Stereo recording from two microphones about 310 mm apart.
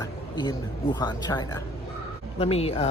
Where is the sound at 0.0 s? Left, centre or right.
Centre.